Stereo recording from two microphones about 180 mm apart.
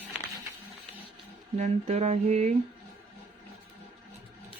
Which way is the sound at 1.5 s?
40° right (ahead or behind).